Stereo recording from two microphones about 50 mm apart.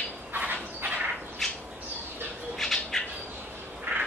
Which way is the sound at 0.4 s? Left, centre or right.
Right.